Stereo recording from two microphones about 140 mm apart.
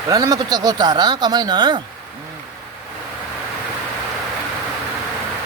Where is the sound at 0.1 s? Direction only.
25° right (ahead or behind).